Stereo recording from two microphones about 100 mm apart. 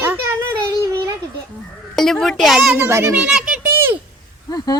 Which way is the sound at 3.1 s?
10° right (ahead or behind).